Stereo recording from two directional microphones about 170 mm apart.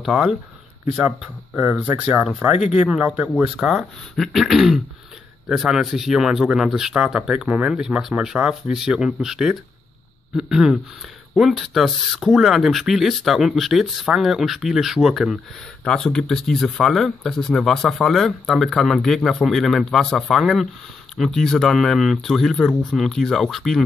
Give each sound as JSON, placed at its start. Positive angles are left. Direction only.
{"t": 0.0, "sound": "speech", "side_deg": 0}